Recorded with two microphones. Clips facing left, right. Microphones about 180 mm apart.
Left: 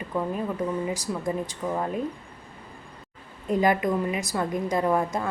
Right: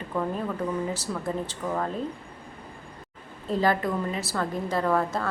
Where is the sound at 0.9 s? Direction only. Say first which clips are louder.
Left 2 dB; 15° left (ahead or behind).